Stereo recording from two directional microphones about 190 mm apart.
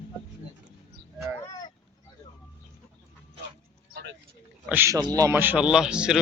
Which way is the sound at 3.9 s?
65° right (ahead or behind).